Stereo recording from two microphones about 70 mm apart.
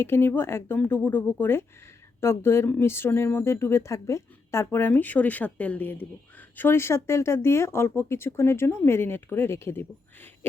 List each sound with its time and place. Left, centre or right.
0.0 s a woman's voice: left